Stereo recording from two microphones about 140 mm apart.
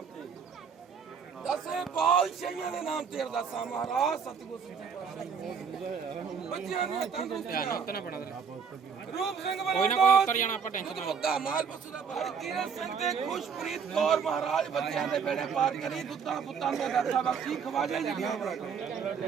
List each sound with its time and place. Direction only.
1.5 s a man's voice: centre (ahead or behind)
6.5 s a man's voice: centre (ahead or behind)
7.4 s speech: 90° left
9.1 s a man's voice: centre (ahead or behind)
10.2 s speech: 65° left (ahead or behind)
10.8 s a man's voice: centre (ahead or behind)